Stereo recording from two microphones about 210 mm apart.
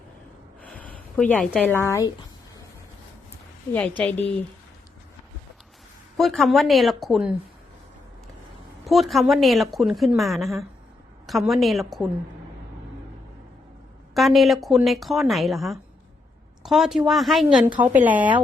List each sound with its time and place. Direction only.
0.6 s speech: 5° left (ahead or behind)
3.7 s a woman's voice: 5° left (ahead or behind)
6.1 s a woman's voice: centre (ahead or behind)
8.8 s a woman's voice: centre (ahead or behind)
14.1 s a woman's voice: centre (ahead or behind)